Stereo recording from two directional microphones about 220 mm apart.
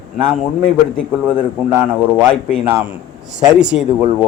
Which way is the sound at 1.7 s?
10° right (ahead or behind).